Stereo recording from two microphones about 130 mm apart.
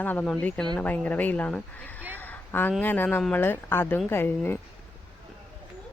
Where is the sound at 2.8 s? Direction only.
15° left (ahead or behind).